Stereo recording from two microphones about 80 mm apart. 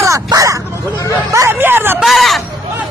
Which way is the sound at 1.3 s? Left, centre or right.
Right.